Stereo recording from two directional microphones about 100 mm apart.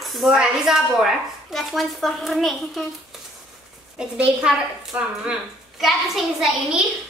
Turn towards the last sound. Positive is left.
turn(degrees=0)  # may be behind; listen again after turning